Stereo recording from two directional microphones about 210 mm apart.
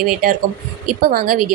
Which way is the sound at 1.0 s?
45° right (ahead or behind).